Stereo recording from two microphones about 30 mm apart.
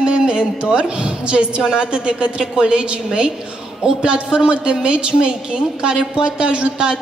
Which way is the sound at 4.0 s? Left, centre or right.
Right.